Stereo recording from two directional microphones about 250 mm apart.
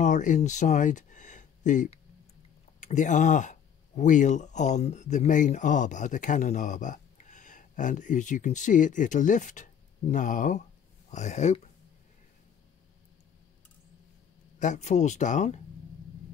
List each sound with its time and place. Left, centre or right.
0.0 s speech: left
14.6 s speech: left